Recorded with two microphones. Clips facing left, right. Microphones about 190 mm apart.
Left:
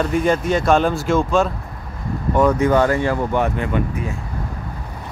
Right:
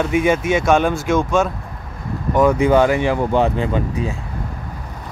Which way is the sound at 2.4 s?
10° right (ahead or behind).